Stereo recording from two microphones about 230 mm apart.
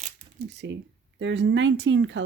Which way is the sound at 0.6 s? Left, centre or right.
Right.